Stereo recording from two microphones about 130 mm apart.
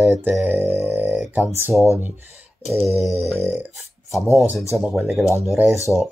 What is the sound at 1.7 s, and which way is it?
Speech, 20° left (ahead or behind).